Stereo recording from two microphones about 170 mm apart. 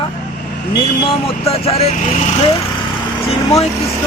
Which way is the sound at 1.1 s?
35° left (ahead or behind).